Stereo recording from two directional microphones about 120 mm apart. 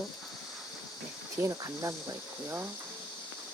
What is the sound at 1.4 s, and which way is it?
Cricket, 25° right (ahead or behind).